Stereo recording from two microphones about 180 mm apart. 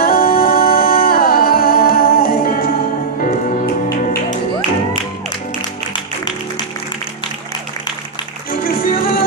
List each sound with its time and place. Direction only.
0.0 s music: 55° left (ahead or behind)
8.5 s music: 55° left (ahead or behind)